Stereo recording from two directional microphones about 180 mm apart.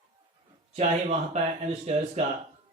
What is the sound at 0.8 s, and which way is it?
Speech, 40° right (ahead or behind).